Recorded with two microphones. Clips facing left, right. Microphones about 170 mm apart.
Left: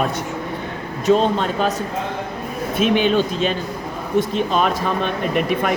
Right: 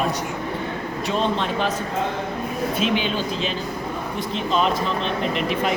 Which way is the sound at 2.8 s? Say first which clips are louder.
Left 9 dB; 50° left (ahead or behind).